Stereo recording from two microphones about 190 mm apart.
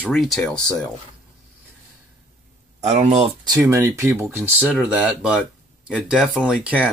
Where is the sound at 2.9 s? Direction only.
35° right (ahead or behind).